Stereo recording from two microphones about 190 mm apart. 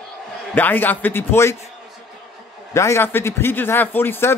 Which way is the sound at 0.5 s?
10° left (ahead or behind).